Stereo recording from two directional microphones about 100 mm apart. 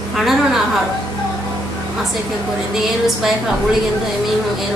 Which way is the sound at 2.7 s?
5° right (ahead or behind).